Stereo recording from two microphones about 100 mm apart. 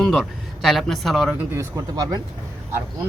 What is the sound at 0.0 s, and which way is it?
Speech, 5° left (ahead or behind).